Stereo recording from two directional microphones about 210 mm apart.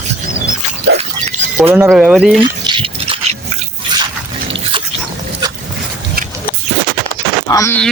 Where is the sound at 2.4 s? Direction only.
25° right (ahead or behind).